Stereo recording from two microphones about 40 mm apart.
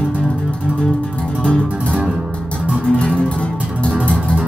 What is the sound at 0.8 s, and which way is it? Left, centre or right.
Music, left.